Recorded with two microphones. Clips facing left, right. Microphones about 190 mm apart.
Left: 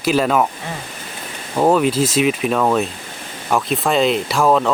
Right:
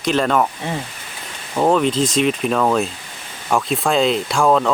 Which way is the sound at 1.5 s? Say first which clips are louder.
Left 1 dB; 5° left (ahead or behind).